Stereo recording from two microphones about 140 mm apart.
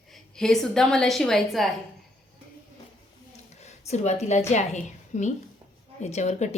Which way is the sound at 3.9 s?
55° left (ahead or behind).